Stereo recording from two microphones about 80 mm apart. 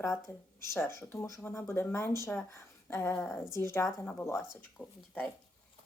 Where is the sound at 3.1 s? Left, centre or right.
Centre.